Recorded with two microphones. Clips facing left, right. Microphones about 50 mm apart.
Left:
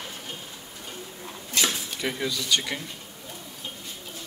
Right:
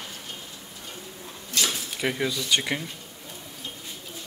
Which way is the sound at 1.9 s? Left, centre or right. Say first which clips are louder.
Right 2 dB; centre.